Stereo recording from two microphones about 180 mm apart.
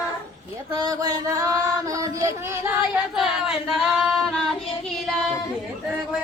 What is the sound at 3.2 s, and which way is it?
Singing, centre (ahead or behind).